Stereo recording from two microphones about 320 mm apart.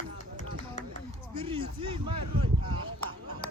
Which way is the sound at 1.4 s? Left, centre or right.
Centre.